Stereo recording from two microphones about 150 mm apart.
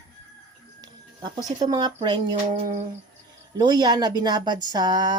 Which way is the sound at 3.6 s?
25° right (ahead or behind).